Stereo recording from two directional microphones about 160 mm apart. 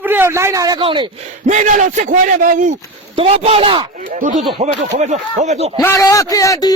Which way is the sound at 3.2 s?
35° right (ahead or behind).